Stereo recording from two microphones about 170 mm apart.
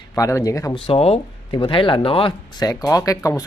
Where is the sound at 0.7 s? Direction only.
35° left (ahead or behind).